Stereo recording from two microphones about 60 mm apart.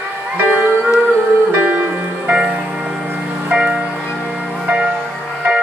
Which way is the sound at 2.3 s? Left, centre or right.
Centre.